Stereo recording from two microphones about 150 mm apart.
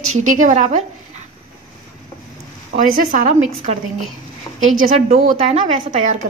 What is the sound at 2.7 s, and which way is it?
Speech, 70° right (ahead or behind).